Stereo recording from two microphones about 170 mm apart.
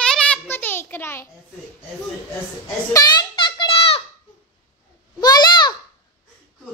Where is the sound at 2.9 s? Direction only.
25° left (ahead or behind).